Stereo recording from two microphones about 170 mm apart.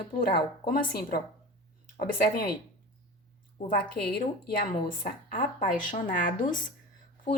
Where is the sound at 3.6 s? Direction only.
65° left (ahead or behind).